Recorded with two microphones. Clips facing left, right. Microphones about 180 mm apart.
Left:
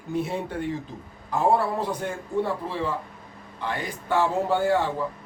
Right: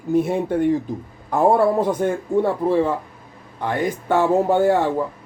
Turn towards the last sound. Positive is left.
turn(degrees=-45)  # may be behind; listen again after turning